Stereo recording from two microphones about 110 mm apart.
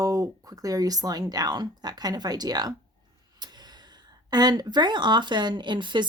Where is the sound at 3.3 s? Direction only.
40° right (ahead or behind).